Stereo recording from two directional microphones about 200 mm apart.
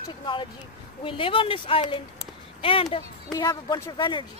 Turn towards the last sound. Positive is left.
turn(degrees=25)  # may be behind; listen again after turning